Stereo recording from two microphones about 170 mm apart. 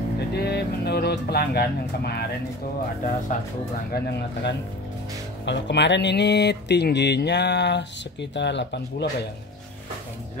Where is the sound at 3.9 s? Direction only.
75° left (ahead or behind).